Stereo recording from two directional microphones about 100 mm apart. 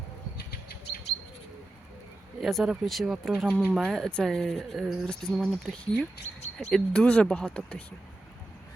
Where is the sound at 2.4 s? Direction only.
Centre (ahead or behind).